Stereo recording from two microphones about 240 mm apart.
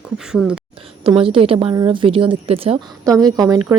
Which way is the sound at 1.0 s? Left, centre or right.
Right.